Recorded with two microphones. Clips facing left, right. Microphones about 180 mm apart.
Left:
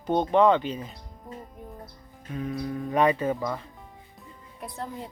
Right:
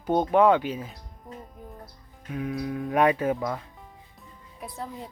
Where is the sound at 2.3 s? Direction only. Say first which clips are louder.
Right 1 dB; 5° right (ahead or behind).